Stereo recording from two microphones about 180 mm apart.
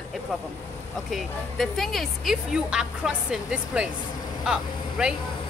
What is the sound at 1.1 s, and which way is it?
Speech, centre (ahead or behind).